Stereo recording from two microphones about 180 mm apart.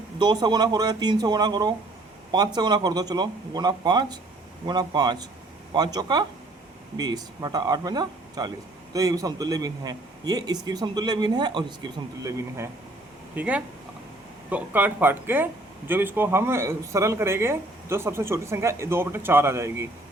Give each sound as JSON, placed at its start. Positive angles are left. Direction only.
{"t": 0.2, "sound": "speech", "side_deg": -25}